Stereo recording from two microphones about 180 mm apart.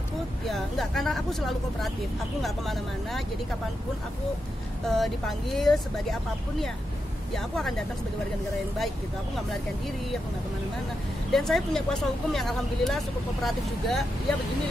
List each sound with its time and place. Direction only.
0.5 s speech: centre (ahead or behind)
4.8 s speech: centre (ahead or behind)
7.5 s speech: centre (ahead or behind)
11.3 s speech: centre (ahead or behind)